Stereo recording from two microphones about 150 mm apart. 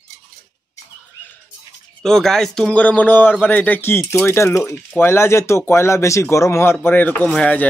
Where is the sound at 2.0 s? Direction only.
5° left (ahead or behind).